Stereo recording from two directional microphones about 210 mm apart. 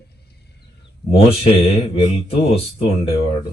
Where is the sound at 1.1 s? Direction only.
30° left (ahead or behind).